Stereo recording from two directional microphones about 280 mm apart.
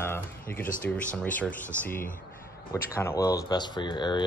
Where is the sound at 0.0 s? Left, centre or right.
Centre.